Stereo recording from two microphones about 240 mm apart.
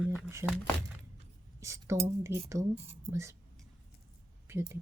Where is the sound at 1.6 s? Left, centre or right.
Centre.